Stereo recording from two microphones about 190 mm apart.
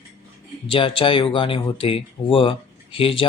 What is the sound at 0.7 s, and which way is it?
Speech, 30° left (ahead or behind).